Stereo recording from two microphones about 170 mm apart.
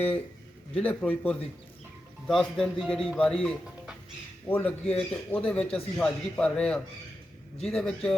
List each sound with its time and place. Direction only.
0.7 s a man's voice: 10° left (ahead or behind)